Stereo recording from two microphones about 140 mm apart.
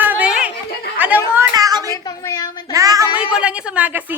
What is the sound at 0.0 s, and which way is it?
Chatter, 10° right (ahead or behind).